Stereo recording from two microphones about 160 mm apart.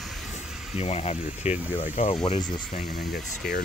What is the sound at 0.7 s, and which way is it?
Speech, 40° left (ahead or behind).